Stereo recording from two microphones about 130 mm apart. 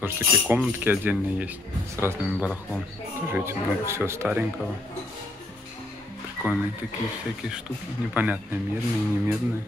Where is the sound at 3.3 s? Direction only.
20° right (ahead or behind).